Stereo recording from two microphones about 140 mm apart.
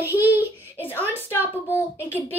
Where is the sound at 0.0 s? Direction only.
15° right (ahead or behind).